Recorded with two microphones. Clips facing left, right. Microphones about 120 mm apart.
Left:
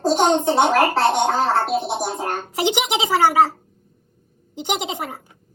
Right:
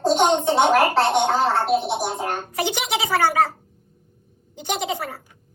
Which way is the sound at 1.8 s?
35° left (ahead or behind).